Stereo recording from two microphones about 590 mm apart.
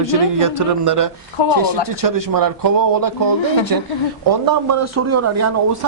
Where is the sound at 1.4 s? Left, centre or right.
Left.